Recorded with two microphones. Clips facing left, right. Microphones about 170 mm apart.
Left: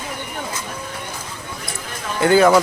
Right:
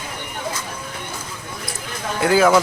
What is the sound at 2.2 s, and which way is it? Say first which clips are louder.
Speech: left 2 dB; centre (ahead or behind).